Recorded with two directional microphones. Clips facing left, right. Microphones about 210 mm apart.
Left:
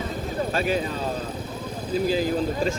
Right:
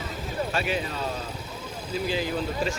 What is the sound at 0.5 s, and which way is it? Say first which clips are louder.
Speech: left 5 dB; 40° left (ahead or behind).